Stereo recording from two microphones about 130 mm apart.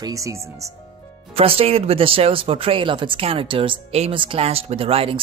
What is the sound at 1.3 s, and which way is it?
Speech, 45° right (ahead or behind).